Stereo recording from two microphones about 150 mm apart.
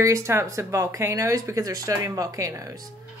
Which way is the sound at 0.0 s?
20° right (ahead or behind).